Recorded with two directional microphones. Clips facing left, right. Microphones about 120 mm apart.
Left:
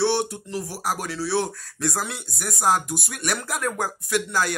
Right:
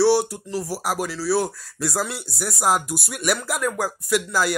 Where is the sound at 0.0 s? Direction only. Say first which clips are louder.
Right 5 dB; 5° right (ahead or behind).